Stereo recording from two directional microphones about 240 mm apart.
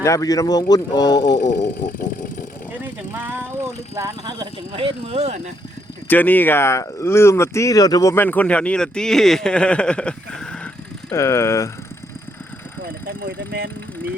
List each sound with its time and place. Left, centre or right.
0.0 s speech: centre
2.8 s speech: centre; by 5.4 s right
6.1 s speech: centre
11.1 s vehicle: centre
13.1 s vehicle: right